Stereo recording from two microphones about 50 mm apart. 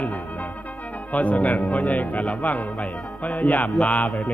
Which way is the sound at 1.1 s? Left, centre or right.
Left.